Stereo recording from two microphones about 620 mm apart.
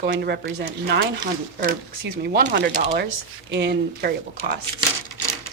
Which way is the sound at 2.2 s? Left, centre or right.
Centre.